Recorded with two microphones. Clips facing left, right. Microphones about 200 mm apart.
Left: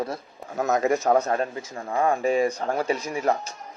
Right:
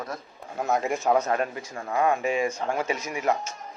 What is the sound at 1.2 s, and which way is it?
Speech, 30° left (ahead or behind).